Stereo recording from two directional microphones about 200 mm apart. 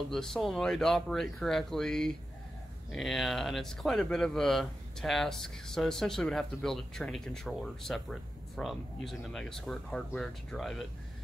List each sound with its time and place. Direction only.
0.1 s speech: centre (ahead or behind)